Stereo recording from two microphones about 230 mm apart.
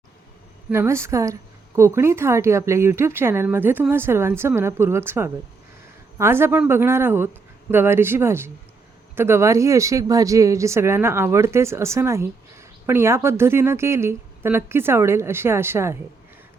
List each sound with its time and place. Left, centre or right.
0.7 s a woman's voice: centre